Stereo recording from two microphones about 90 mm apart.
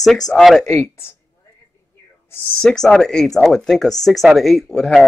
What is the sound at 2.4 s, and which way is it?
Speech, 5° left (ahead or behind).